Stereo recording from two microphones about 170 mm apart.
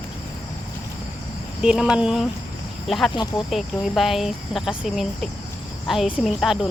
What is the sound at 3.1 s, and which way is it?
Speech, 30° left (ahead or behind).